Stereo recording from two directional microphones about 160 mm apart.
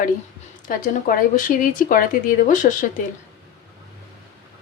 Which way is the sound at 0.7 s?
60° left (ahead or behind).